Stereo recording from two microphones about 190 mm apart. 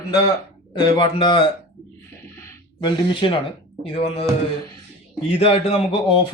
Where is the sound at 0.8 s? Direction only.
25° left (ahead or behind).